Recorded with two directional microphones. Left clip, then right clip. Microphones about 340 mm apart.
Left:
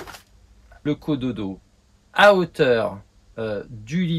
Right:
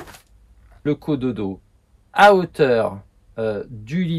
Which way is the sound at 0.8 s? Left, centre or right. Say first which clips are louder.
Right 3 dB; centre.